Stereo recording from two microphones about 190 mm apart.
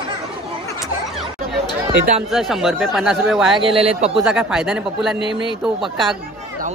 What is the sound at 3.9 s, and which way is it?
Speech, 30° right (ahead or behind).